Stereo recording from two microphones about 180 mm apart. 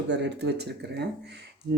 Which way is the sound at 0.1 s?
70° right (ahead or behind).